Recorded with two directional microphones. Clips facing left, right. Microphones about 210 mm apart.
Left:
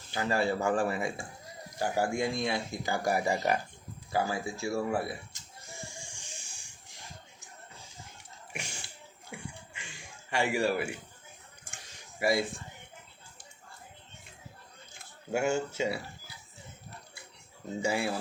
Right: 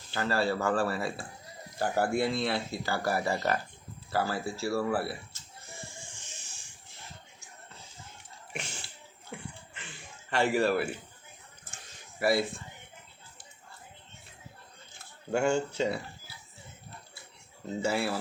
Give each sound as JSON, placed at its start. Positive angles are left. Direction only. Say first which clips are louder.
{"t": 0.1, "sound": "speech", "louder": "even", "side_deg": 15}
{"t": 4.1, "sound": "bleat", "louder": "even", "side_deg": 15}
{"t": 8.5, "sound": "bathtub", "louder": "right 2 dB", "side_deg": 10}
{"t": 9.3, "sound": "a sound", "louder": "right 1 dB", "side_deg": 10}
{"t": 12.2, "sound": "speech", "louder": "right 1 dB", "side_deg": 15}
{"t": 14.9, "sound": "speech", "louder": "right 2 dB", "side_deg": 5}
{"t": 17.8, "sound": "speech", "louder": "right 1 dB", "side_deg": 15}